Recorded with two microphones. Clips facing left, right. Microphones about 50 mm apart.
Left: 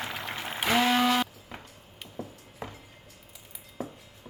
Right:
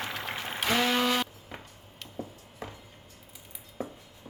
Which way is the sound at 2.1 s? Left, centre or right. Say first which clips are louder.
Even; centre.